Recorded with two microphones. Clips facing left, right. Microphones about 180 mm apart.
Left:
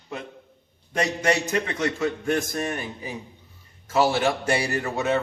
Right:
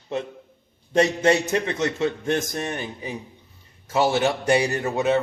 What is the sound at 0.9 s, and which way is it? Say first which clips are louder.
A man's voice: right 5 dB; 25° right (ahead or behind).